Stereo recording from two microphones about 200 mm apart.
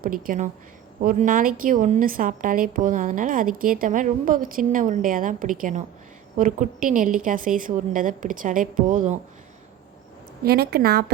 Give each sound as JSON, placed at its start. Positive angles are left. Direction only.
{"t": 0.0, "sound": "a woman's voice", "side_deg": -45}
{"t": 10.4, "sound": "a woman's voice", "side_deg": -50}